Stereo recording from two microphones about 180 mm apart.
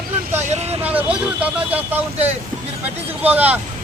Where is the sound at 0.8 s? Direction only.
10° right (ahead or behind).